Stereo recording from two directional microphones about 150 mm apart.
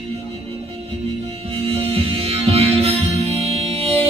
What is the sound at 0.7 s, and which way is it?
Music, 35° right (ahead or behind).